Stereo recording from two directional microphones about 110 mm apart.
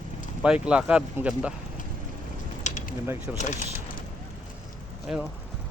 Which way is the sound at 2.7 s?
90° left.